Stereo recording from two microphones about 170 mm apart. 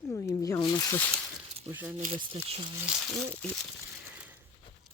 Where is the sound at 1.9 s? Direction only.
50° right (ahead or behind).